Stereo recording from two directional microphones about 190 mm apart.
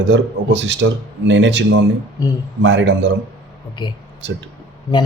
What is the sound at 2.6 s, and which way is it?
Speech, 70° right (ahead or behind).